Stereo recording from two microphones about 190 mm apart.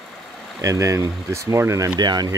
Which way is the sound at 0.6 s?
15° right (ahead or behind).